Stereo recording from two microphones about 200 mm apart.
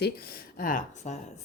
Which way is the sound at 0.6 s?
40° left (ahead or behind).